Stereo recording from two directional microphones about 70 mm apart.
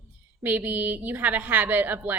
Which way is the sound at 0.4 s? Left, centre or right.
Right.